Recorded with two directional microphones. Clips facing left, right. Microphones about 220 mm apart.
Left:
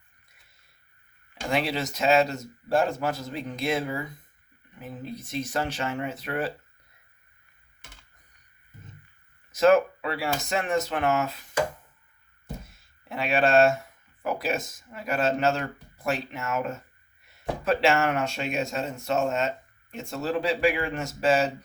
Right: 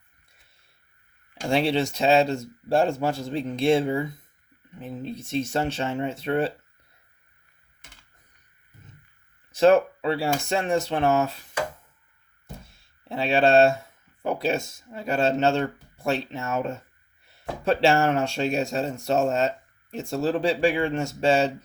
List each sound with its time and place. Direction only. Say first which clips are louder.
1.5 s speech: right 5 dB; 30° right (ahead or behind)
9.5 s speech: right 2 dB; 30° right (ahead or behind)
13.1 s speech: right 3 dB; 30° right (ahead or behind)